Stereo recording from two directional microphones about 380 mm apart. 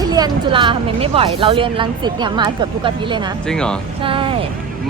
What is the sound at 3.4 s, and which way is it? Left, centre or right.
Speech, centre.